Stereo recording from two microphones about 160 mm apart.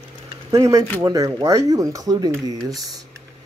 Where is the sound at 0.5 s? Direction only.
20° right (ahead or behind).